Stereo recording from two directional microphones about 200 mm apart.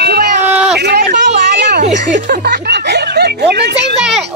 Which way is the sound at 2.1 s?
55° right (ahead or behind).